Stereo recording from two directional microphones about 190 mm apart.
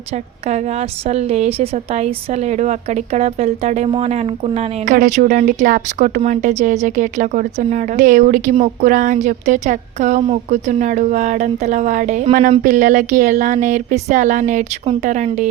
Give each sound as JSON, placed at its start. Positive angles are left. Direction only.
{"t": 0.4, "sound": "a woman's voice", "side_deg": -35}